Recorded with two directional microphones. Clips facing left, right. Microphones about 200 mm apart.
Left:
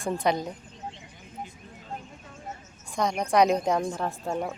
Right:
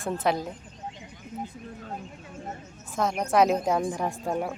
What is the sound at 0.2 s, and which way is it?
Speech, 5° right (ahead or behind).